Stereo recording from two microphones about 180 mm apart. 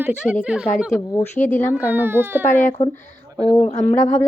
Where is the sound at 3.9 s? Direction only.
40° left (ahead or behind).